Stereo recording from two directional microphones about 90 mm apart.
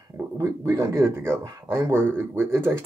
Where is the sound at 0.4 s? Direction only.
35° right (ahead or behind).